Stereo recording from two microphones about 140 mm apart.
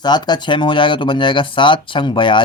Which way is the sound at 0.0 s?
30° left (ahead or behind).